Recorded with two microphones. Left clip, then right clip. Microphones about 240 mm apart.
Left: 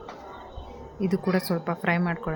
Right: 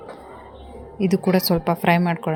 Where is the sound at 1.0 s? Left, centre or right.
Centre.